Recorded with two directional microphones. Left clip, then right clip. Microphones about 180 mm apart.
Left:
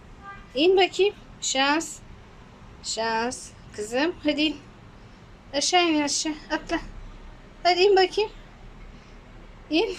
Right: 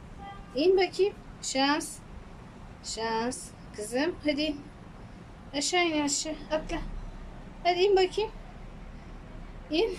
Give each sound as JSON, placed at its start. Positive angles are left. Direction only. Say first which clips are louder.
{"t": 0.5, "sound": "a woman's voice", "louder": "left 5 dB", "side_deg": 0}
{"t": 9.6, "sound": "a woman's voice", "louder": "left 4 dB", "side_deg": 0}